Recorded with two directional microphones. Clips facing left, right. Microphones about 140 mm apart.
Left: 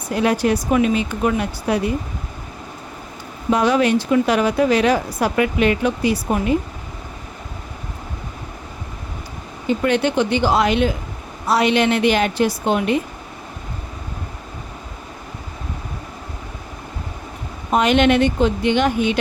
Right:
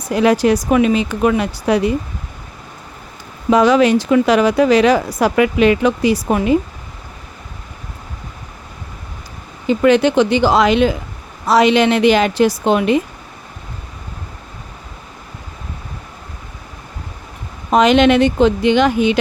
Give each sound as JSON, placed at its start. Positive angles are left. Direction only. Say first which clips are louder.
{"t": 0.1, "sound": "speech", "louder": "right 5 dB", "side_deg": -90}
{"t": 3.5, "sound": "speech", "louder": "right 5 dB", "side_deg": -90}
{"t": 9.6, "sound": "speech", "louder": "right 6 dB", "side_deg": -90}
{"t": 17.7, "sound": "speech", "louder": "right 4 dB", "side_deg": -90}